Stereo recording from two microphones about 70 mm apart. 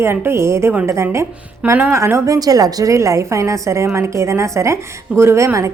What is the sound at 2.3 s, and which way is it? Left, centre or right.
A woman's voice, right.